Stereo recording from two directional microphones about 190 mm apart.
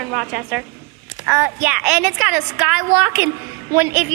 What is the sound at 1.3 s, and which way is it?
A woman's voice, 15° right (ahead or behind).